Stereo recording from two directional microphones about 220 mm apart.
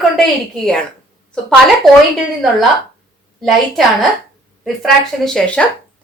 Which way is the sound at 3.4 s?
Centre (ahead or behind).